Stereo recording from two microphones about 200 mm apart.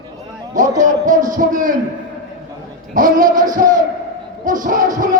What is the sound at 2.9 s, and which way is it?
Speech, 40° right (ahead or behind).